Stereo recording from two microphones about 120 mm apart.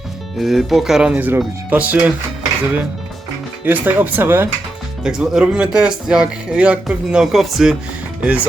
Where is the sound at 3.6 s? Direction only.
15° right (ahead or behind).